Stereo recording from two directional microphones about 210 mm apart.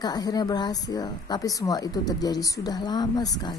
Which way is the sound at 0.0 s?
20° left (ahead or behind).